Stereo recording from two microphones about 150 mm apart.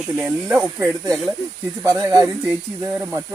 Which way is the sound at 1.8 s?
20° right (ahead or behind).